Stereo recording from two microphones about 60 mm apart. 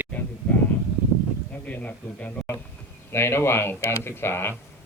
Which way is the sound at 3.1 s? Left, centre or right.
Left.